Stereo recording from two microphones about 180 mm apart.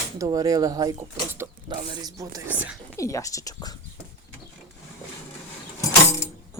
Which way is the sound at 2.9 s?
15° left (ahead or behind).